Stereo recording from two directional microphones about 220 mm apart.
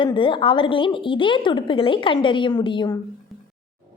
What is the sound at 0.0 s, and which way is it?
A woman's voice, 20° left (ahead or behind).